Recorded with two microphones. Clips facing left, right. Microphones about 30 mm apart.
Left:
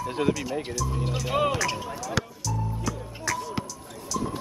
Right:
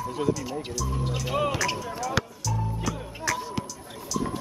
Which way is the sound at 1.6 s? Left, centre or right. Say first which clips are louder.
Right 1 dB; centre.